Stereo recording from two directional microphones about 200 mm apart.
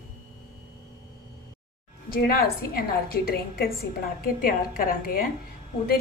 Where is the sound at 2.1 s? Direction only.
50° left (ahead or behind).